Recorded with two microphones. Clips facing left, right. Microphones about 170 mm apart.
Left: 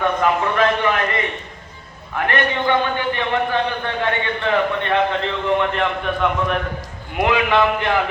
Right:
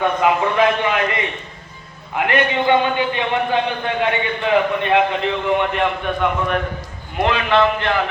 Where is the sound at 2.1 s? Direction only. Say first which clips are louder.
Right 2 dB; 15° right (ahead or behind).